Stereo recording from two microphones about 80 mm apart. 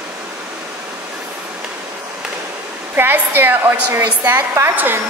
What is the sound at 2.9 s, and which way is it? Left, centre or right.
A woman's voice, right.